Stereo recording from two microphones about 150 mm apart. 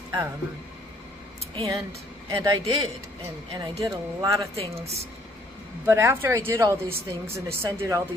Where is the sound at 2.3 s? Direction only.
25° right (ahead or behind).